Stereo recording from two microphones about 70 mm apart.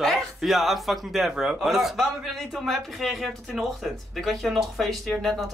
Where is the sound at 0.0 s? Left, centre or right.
Centre.